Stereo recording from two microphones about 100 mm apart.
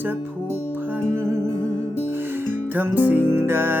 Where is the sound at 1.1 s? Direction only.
25° right (ahead or behind).